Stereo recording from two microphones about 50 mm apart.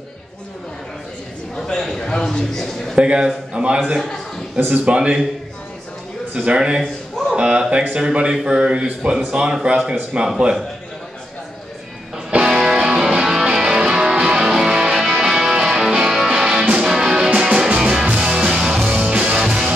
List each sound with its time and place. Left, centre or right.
1.7 s a sound: centre
3.0 s speech: right
4.6 s speech: right
4.8 s speech: right
6.3 s speech: centre
12.4 s music: centre
18.9 s music: right